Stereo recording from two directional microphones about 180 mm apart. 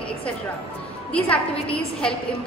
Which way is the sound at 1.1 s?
5° left (ahead or behind).